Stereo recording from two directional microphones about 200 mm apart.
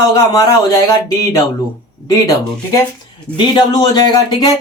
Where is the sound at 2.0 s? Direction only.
15° left (ahead or behind).